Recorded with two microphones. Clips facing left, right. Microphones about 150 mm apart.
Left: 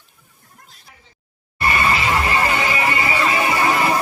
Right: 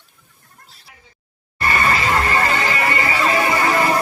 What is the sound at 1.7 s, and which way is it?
Music, 15° left (ahead or behind).